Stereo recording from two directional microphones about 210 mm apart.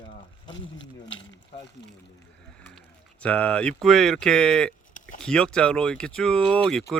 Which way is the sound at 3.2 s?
5° left (ahead or behind).